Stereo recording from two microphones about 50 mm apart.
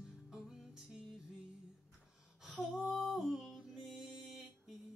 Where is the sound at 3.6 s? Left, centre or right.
Centre.